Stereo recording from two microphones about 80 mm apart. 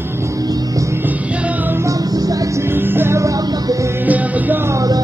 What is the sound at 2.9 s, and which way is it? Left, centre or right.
Music, right.